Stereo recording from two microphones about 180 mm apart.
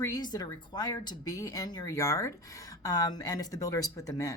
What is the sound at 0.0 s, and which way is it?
Speech, 20° left (ahead or behind).